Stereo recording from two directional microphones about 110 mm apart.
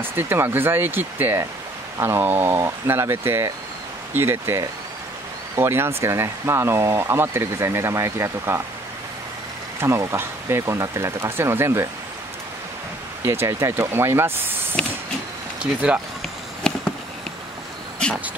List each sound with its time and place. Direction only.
0.1 s speech: 20° right (ahead or behind)
9.8 s speech: 25° right (ahead or behind)
13.2 s speech: 25° right (ahead or behind)
14.8 s a sound: 10° left (ahead or behind)
15.6 s speech: 10° right (ahead or behind)
16.6 s a sound: 5° left (ahead or behind)